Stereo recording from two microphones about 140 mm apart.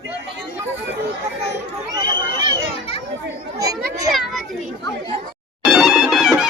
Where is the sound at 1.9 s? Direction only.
30° right (ahead or behind).